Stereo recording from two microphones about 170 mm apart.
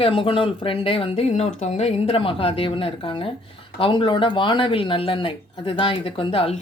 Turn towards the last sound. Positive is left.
turn(degrees=35)  # may be behind; listen again after turning